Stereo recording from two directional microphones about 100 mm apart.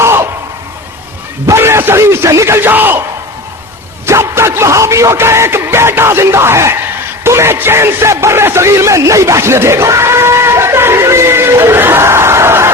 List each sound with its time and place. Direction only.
0.0 s a sound: 25° right (ahead or behind)
1.5 s speech: 25° right (ahead or behind)
4.0 s speech: 25° right (ahead or behind)
7.3 s music: 25° right (ahead or behind)